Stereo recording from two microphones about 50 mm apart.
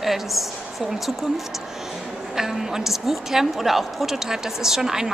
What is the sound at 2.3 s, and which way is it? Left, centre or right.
Speech, centre.